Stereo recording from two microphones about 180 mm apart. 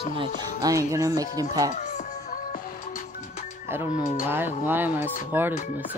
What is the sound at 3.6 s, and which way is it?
Speech, 10° right (ahead or behind).